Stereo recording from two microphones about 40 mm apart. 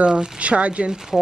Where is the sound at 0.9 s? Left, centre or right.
Centre.